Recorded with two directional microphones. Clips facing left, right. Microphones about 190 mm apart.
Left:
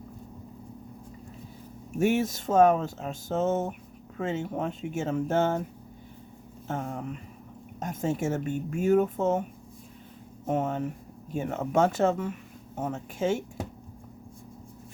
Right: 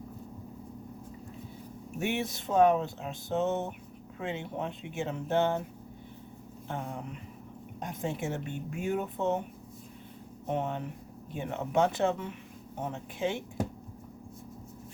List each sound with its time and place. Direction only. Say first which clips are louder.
2.0 s speech: left 7 dB; 45° left (ahead or behind)
6.7 s speech: left 5 dB; 45° left (ahead or behind)
10.4 s speech: left 5 dB; 45° left (ahead or behind)